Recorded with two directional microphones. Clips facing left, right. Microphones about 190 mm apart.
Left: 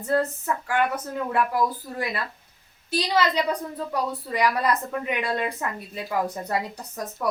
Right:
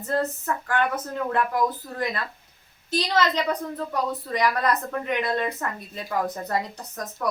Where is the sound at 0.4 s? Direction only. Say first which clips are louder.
Left 1 dB; 10° left (ahead or behind).